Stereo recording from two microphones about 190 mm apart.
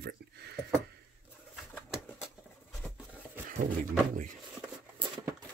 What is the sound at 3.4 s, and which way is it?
Speech, 45° right (ahead or behind).